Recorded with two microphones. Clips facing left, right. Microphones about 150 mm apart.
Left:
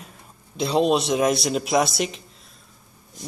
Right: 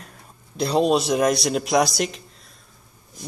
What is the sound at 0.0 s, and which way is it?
A man's voice, centre (ahead or behind).